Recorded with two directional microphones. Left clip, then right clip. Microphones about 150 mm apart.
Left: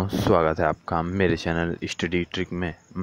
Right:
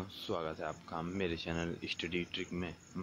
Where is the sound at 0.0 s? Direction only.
60° left (ahead or behind).